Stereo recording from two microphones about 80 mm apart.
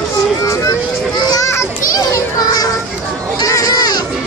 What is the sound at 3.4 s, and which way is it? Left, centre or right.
Baby cry, left.